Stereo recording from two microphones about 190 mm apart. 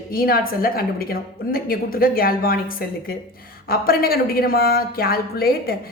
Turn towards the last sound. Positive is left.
turn(degrees=50)  # may be behind; listen again after turning